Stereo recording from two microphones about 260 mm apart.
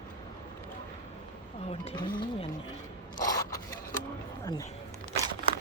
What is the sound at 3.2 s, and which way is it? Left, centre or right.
Scrape, centre.